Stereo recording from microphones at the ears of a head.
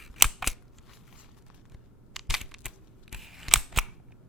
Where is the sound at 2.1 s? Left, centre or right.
Centre.